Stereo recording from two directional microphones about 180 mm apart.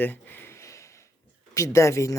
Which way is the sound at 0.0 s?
10° left (ahead or behind).